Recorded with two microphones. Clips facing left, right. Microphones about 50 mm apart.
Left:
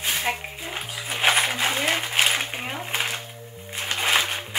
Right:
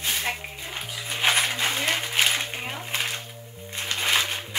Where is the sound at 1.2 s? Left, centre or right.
Centre.